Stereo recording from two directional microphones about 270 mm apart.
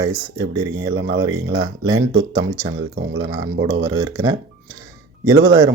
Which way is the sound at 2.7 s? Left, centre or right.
Right.